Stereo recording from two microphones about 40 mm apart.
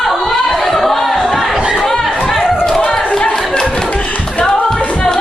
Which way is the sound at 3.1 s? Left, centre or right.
Centre.